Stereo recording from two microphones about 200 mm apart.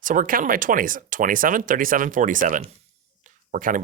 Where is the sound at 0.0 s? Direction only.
40° right (ahead or behind).